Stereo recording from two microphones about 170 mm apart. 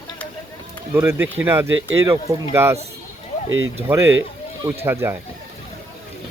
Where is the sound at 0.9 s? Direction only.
15° right (ahead or behind).